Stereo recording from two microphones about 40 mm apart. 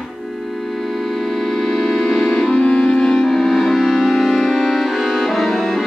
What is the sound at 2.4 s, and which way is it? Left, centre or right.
Music, left.